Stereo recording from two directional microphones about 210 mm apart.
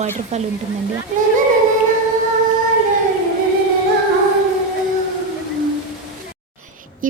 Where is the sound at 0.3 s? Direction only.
35° right (ahead or behind).